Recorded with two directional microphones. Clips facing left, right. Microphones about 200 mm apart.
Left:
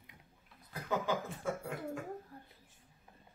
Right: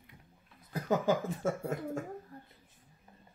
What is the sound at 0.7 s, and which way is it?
Speech, 40° right (ahead or behind).